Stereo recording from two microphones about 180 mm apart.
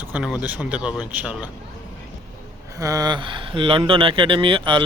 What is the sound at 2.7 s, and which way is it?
Speech, 20° right (ahead or behind).